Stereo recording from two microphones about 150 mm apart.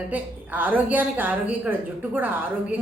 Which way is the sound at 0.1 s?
10° right (ahead or behind).